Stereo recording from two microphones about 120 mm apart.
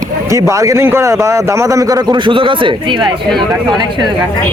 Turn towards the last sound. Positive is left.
turn(degrees=-45)  # may be behind; listen again after turning